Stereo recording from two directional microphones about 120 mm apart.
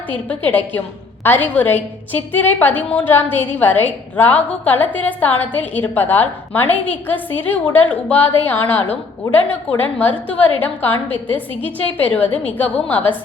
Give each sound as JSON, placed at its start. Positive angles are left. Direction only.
{"t": 0.3, "sound": "a woman's voice", "side_deg": 15}